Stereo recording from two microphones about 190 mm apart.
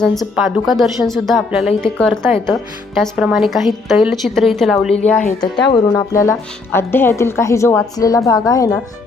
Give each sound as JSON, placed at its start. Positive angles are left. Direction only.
{"t": 0.0, "sound": "a woman's voice", "side_deg": 0}
{"t": 5.4, "sound": "a woman's voice", "side_deg": 20}